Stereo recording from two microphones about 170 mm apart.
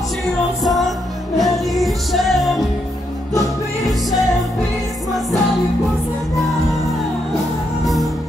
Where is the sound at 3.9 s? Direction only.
Centre (ahead or behind).